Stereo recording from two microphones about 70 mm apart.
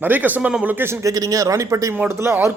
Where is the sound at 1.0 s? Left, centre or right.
Right.